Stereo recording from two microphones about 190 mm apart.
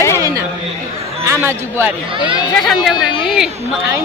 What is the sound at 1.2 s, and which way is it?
Speech, 15° right (ahead or behind).